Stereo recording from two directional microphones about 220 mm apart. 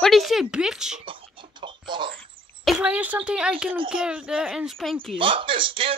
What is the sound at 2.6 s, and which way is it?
A child's voice, 5° right (ahead or behind).